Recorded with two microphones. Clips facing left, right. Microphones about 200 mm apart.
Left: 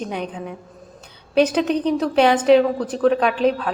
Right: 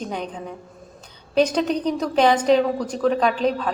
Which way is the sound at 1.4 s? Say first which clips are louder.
Left 2 dB; 5° left (ahead or behind).